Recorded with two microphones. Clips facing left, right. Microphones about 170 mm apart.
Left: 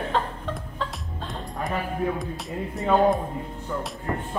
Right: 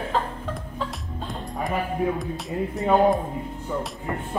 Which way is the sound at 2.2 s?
Centre (ahead or behind).